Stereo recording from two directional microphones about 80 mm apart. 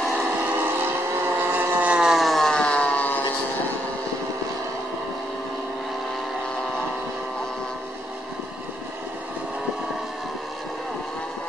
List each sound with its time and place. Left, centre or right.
0.0 s vehicle: centre
0.4 s vehicle: right
2.0 s a sound: centre